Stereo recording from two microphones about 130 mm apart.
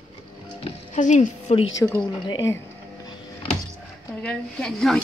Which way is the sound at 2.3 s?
25° left (ahead or behind).